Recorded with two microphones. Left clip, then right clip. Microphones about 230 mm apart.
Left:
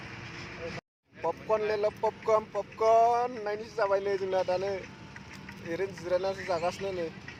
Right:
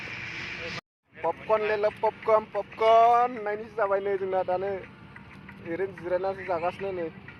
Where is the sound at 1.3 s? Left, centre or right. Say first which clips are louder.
Right 3 dB; centre.